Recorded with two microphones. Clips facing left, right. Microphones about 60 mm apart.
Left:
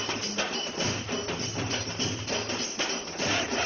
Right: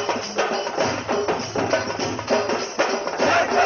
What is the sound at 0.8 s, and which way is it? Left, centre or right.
Music, right.